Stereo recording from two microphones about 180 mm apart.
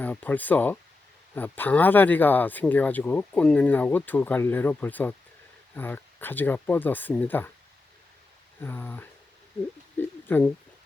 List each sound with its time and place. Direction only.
0.0 s speech: 10° left (ahead or behind)
8.6 s speech: 10° left (ahead or behind)